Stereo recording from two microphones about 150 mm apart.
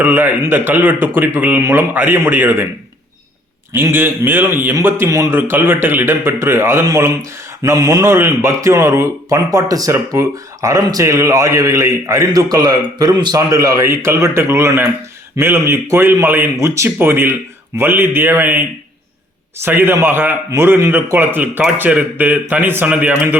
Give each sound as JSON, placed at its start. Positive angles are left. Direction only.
{"t": 0.0, "sound": "a man's voice", "side_deg": -15}
{"t": 3.7, "sound": "a man's voice", "side_deg": -15}